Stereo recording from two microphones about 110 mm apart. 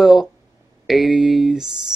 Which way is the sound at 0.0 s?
Centre (ahead or behind).